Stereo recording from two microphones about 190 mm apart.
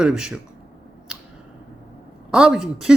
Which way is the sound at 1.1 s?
5° right (ahead or behind).